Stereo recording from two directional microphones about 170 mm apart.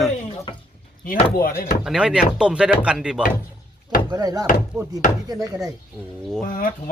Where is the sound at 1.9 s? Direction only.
5° right (ahead or behind).